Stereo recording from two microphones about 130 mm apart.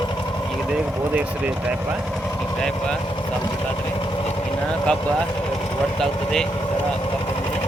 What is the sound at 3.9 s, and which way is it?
Vehicle, 40° left (ahead or behind).